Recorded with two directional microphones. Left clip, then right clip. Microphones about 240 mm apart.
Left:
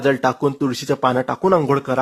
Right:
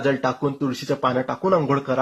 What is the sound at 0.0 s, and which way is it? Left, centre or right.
Speech, left.